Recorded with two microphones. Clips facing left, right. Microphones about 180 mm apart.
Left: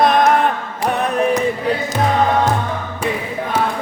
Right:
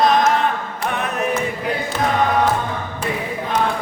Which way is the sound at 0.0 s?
55° left (ahead or behind).